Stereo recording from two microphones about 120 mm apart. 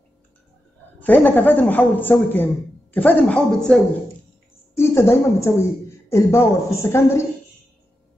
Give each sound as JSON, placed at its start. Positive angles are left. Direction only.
{"t": 1.0, "sound": "a man's voice", "side_deg": 15}
{"t": 4.7, "sound": "speech", "side_deg": 20}